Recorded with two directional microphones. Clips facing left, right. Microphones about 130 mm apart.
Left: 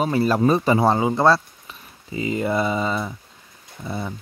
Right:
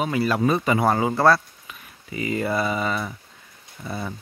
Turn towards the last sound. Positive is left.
turn(degrees=20)  # may be behind; listen again after turning